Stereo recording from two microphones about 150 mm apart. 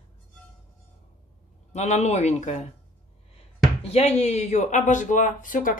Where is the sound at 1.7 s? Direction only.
50° left (ahead or behind).